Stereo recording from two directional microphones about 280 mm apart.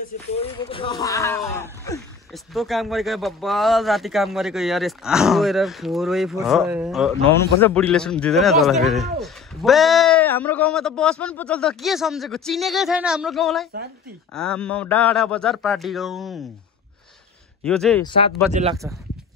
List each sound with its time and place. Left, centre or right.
0.3 s a man's voice: left; by 16.4 s centre
17.6 s a man's voice: centre
18.0 s speech: centre
18.5 s speech: right